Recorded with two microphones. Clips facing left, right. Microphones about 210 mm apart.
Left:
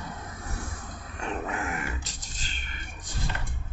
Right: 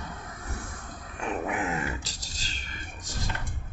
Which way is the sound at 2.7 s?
40° right (ahead or behind).